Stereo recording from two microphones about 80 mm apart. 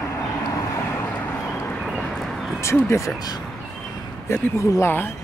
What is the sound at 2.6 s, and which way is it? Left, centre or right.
Speech, left.